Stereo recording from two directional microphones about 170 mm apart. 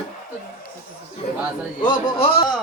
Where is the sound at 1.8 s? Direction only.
30° left (ahead or behind).